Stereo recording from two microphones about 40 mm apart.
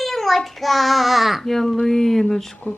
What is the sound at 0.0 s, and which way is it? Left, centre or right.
A woman's voice, centre.